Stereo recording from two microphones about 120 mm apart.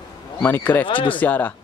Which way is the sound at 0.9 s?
45° left (ahead or behind).